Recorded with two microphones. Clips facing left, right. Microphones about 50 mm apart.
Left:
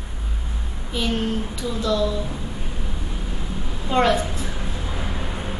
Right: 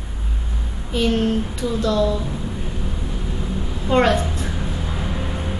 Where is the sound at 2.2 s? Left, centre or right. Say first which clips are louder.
Right 3 dB; centre.